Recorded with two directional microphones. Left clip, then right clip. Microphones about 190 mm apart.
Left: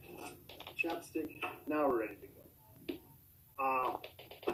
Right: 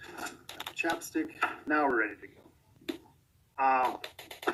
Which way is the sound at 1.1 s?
45° right (ahead or behind).